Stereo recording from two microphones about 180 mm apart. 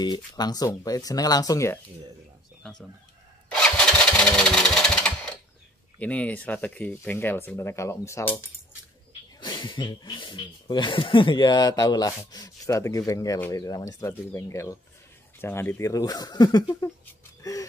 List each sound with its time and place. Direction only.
0.0 s speech: 25° left (ahead or behind)
3.4 s engine: 5° left (ahead or behind)
5.9 s speech: 5° left (ahead or behind)
9.4 s speech: 25° left (ahead or behind)
17.4 s a sound: 20° left (ahead or behind)